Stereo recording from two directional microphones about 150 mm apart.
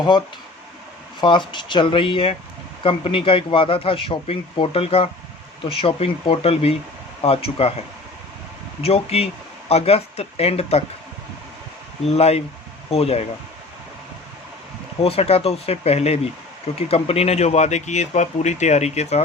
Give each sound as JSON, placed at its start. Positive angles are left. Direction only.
{"t": 1.2, "sound": "a man's voice", "side_deg": 30}
{"t": 12.0, "sound": "a man's voice", "side_deg": 45}
{"t": 15.0, "sound": "speech", "side_deg": 40}